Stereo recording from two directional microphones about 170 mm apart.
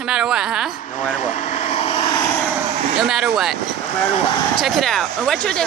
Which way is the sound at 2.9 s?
5° right (ahead or behind).